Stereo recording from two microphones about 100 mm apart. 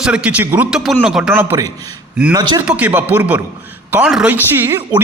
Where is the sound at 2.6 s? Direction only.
15° right (ahead or behind).